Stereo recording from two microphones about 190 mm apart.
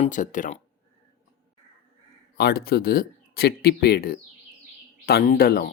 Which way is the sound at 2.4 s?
55° left (ahead or behind).